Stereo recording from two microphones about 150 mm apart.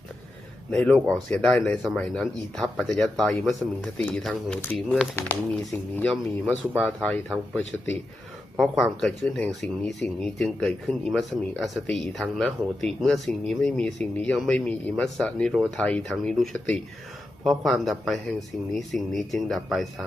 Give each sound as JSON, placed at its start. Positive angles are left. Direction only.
{"t": 0.7, "sound": "speech", "side_deg": 5}